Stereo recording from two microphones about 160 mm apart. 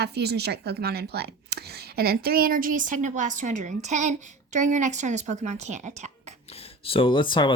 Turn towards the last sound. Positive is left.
turn(degrees=30)  # may be behind; listen again after turning